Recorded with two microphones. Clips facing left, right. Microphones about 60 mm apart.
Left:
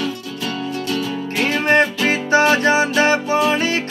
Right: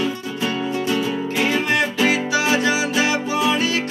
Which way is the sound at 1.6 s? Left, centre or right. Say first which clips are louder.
Left 3 dB; left.